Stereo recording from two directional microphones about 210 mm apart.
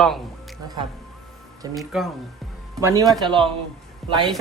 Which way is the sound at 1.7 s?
Centre (ahead or behind).